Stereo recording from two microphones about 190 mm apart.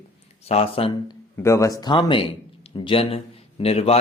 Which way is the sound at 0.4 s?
30° left (ahead or behind).